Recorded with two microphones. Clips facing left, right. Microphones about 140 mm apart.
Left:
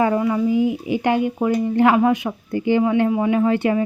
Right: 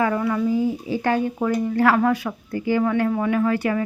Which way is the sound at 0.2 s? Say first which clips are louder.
Left 3 dB; 15° left (ahead or behind).